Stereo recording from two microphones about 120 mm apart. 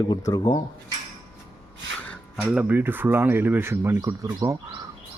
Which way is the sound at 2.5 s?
15° right (ahead or behind).